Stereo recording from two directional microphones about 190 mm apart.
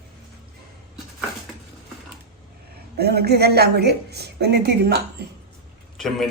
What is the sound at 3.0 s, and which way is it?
A woman's voice, 55° right (ahead or behind).